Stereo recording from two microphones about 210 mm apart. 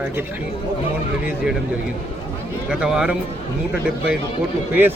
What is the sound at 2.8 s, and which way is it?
Speech, 5° right (ahead or behind).